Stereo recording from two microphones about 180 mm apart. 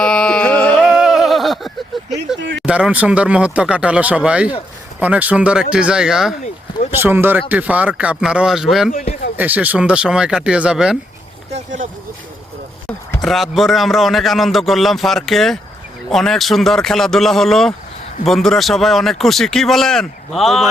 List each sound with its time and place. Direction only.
0.0 s a sound: 5° left (ahead or behind)
2.6 s a man's voice: 5° right (ahead or behind)
8.9 s speech: 45° left (ahead or behind)
9.4 s a man's voice: 10° right (ahead or behind)
11.5 s speech: 45° right (ahead or behind)
13.1 s a man's voice: centre (ahead or behind)